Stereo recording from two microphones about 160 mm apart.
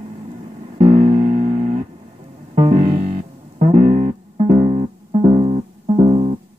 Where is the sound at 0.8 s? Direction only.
45° right (ahead or behind).